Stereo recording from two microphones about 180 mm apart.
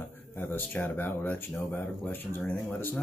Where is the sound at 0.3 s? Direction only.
10° left (ahead or behind).